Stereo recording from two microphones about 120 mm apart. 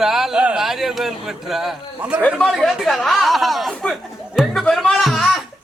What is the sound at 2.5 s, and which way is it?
Chatter, centre (ahead or behind).